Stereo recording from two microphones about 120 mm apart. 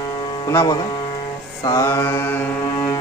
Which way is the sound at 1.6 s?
25° left (ahead or behind).